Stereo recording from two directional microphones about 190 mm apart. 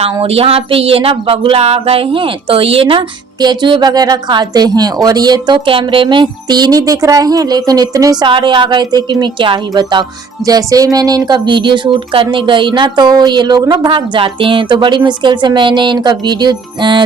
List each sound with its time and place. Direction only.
0.0 s speech: 30° right (ahead or behind)